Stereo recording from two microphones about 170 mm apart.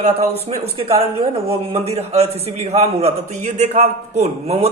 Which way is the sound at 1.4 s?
35° right (ahead or behind).